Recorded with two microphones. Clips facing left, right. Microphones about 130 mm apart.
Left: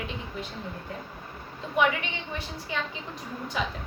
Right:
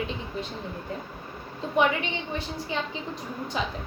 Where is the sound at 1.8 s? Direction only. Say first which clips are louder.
Right 2 dB; 25° right (ahead or behind).